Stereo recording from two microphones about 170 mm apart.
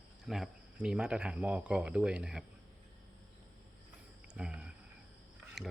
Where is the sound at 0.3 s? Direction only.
Centre (ahead or behind).